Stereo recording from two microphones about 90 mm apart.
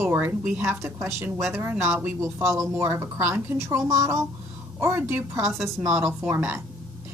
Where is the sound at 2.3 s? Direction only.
30° right (ahead or behind).